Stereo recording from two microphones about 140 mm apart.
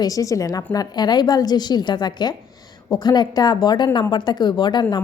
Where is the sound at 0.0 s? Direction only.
25° left (ahead or behind).